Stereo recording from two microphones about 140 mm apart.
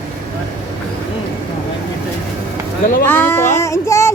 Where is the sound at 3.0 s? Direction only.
15° left (ahead or behind).